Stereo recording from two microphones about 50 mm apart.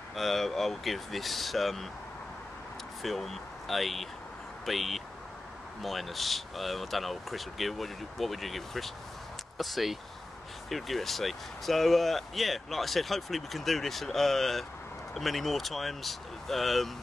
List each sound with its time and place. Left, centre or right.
0.1 s speech: centre
3.0 s speech: centre